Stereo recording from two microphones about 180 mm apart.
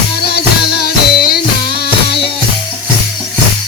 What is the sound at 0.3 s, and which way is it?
Music, 60° left (ahead or behind).